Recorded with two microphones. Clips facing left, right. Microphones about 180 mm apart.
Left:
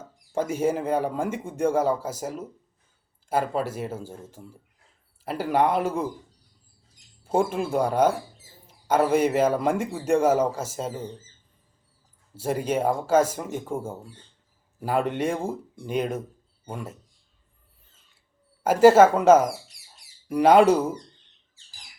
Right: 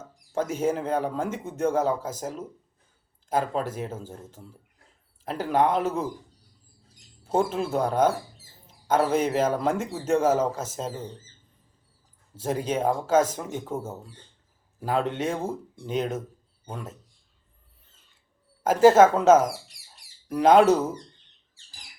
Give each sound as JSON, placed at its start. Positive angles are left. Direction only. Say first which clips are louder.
{"t": 0.3, "sound": "speech", "louder": "left 1 dB", "side_deg": 10}
{"t": 7.3, "sound": "speech", "louder": "left 1 dB", "side_deg": 10}
{"t": 12.3, "sound": "speech", "louder": "left 2 dB", "side_deg": 10}
{"t": 18.6, "sound": "speech", "louder": "left 1 dB", "side_deg": 10}